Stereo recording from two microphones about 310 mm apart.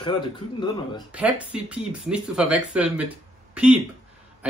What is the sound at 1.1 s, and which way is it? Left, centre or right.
Speech, centre.